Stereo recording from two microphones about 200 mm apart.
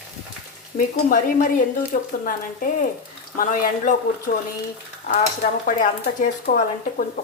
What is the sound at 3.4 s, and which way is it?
Speech, 45° left (ahead or behind).